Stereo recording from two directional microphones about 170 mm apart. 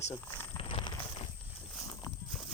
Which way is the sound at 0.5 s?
30° left (ahead or behind).